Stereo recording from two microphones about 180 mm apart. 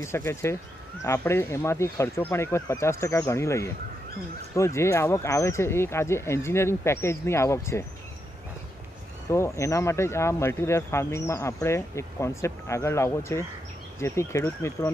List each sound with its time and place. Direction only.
0.0 s speech: 15° left (ahead or behind)
9.3 s speech: 15° left (ahead or behind)